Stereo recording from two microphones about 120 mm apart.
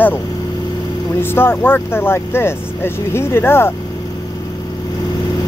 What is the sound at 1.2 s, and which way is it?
Speech, 20° left (ahead or behind).